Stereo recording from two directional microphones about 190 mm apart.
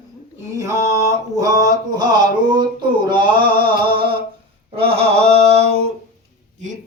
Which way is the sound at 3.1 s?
25° right (ahead or behind).